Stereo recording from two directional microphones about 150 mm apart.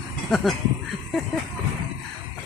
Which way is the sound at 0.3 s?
5° left (ahead or behind).